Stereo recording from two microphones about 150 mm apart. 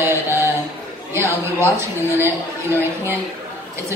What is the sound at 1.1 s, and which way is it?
A man's voice, 15° right (ahead or behind).